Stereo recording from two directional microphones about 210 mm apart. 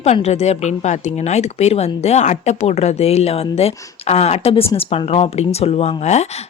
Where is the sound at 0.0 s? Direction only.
30° left (ahead or behind).